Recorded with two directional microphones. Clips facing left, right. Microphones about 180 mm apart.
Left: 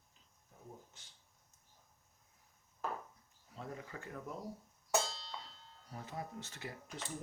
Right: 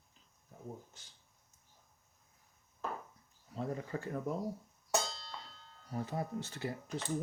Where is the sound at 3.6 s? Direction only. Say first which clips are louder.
Right 8 dB; 35° right (ahead or behind).